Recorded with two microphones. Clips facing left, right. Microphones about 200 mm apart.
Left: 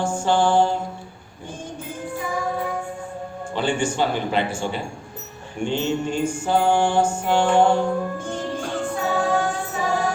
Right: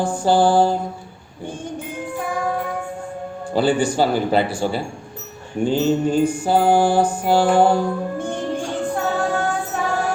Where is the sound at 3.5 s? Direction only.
35° right (ahead or behind).